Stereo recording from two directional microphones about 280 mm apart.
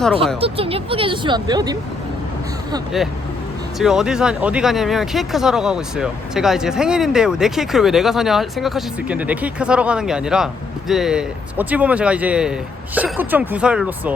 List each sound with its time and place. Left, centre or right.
0.3 s speech: centre
3.8 s speech: centre